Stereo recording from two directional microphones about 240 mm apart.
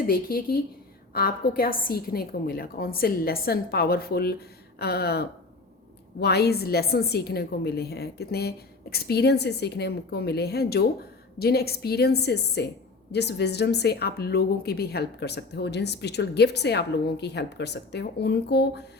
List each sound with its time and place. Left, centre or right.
0.1 s a woman's voice: left